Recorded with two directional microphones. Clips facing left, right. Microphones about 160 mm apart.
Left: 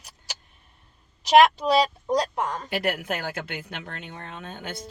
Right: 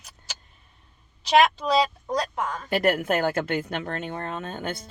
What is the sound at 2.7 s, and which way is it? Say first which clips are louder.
A woman's voice: right 5 dB; 45° right (ahead or behind).